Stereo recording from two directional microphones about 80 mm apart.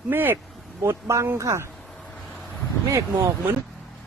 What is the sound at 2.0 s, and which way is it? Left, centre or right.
Vehicle, centre.